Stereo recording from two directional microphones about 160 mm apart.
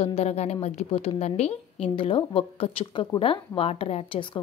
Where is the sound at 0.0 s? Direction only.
40° left (ahead or behind).